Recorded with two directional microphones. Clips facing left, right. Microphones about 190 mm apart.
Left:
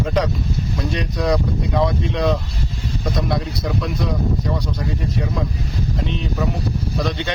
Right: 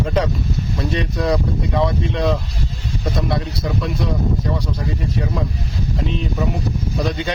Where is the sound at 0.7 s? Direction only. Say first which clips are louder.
Right 3 dB; centre (ahead or behind).